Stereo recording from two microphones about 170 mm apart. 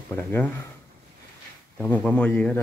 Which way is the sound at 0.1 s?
10° left (ahead or behind).